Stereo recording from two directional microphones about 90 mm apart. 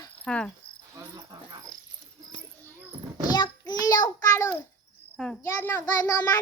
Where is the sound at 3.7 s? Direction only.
50° left (ahead or behind).